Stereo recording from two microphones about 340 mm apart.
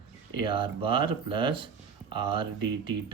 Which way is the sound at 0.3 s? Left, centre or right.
Centre.